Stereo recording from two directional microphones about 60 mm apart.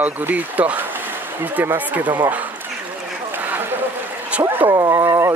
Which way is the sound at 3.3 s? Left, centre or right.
Right.